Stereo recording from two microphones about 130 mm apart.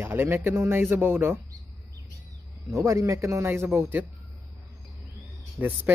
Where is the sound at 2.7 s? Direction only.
25° right (ahead or behind).